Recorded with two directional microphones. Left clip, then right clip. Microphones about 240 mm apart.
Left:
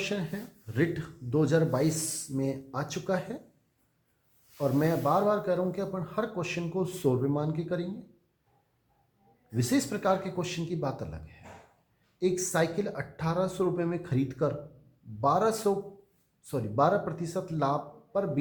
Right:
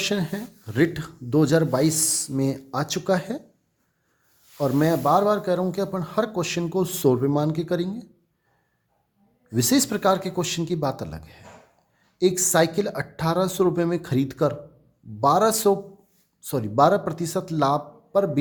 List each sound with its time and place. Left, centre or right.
0.0 s speech: right
4.5 s a man's voice: right
9.6 s a man's voice: right